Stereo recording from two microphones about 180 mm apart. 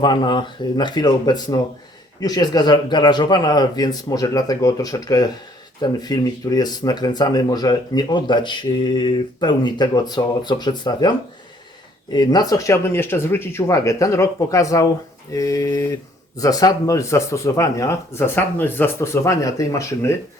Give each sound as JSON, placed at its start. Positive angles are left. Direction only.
{"t": 0.0, "sound": "speech", "side_deg": 25}
{"t": 12.1, "sound": "speech", "side_deg": 20}